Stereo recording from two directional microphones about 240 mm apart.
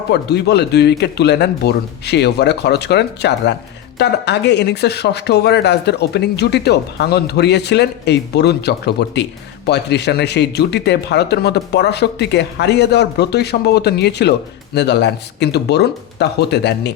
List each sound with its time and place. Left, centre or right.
0.1 s speech: left